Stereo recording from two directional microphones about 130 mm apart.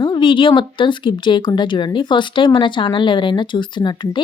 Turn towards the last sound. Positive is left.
turn(degrees=35)  # may be behind; listen again after turning